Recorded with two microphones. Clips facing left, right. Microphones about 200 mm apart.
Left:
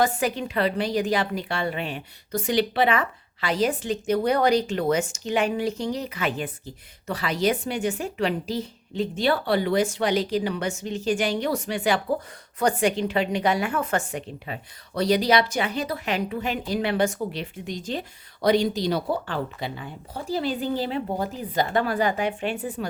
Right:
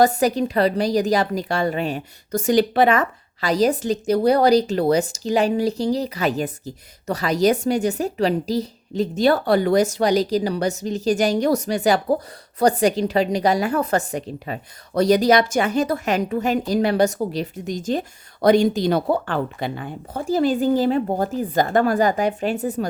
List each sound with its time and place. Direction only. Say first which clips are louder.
0.0 s a woman's voice: right 6 dB; 40° right (ahead or behind)